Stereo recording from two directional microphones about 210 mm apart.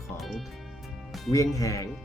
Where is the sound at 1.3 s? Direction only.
15° left (ahead or behind).